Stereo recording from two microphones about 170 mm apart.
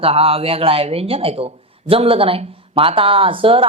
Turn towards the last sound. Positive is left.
turn(degrees=-30)  # may be behind; listen again after turning